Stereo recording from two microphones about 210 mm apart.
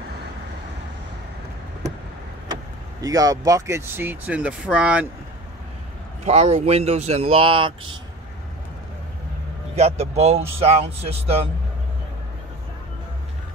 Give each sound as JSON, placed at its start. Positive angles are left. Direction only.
{"t": 3.0, "sound": "speech", "side_deg": -15}
{"t": 6.2, "sound": "speech", "side_deg": -30}
{"t": 9.8, "sound": "speech", "side_deg": -30}